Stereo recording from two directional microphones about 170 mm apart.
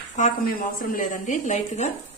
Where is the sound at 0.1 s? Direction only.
55° left (ahead or behind).